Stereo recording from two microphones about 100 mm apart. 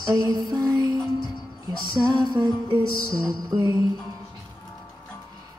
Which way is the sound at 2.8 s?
30° right (ahead or behind).